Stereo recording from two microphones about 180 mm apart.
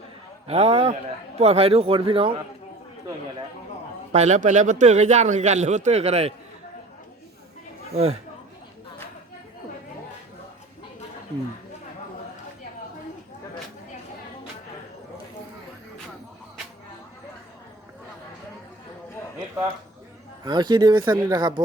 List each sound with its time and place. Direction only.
0.4 s a man's voice: 35° right (ahead or behind)
4.1 s a man's voice: 40° right (ahead or behind)
20.4 s speech: 25° right (ahead or behind)